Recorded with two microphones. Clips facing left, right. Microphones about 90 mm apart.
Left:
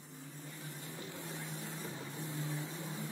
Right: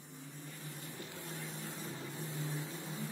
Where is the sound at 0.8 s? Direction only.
20° left (ahead or behind).